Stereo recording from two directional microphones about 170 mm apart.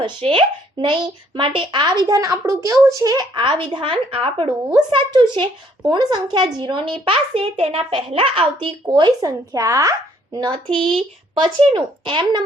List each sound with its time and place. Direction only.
0.0 s a child's voice: 30° right (ahead or behind)